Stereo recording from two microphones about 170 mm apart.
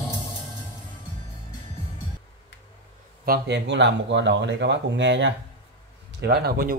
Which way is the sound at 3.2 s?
75° right (ahead or behind).